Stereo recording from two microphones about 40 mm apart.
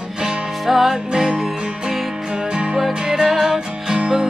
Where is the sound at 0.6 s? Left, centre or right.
Centre.